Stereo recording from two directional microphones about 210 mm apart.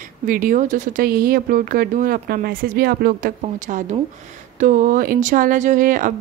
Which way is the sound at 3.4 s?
35° right (ahead or behind).